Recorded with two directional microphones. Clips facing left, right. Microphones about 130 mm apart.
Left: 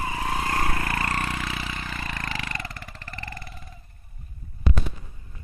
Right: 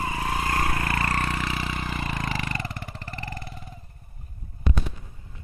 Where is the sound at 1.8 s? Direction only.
15° right (ahead or behind).